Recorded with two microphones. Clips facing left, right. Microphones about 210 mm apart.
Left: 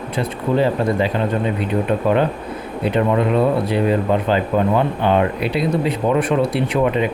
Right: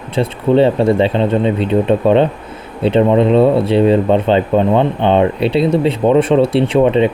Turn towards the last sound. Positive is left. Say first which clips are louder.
# right 6 dB
turn(degrees=-25)  # may be behind; listen again after turning